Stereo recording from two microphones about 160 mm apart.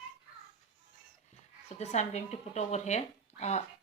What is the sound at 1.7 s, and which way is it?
Speech, 45° left (ahead or behind).